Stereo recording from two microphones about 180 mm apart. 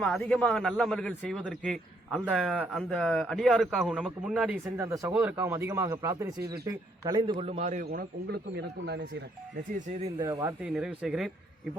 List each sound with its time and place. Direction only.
0.0 s speech: 5° left (ahead or behind)
4.8 s a man's voice: 15° right (ahead or behind)
7.3 s a man's voice: 35° right (ahead or behind); by 9.0 s 65° right (ahead or behind)
9.7 s a man's voice: 45° right (ahead or behind)
10.2 s speech: 15° right (ahead or behind)
10.6 s speech: 5° right (ahead or behind)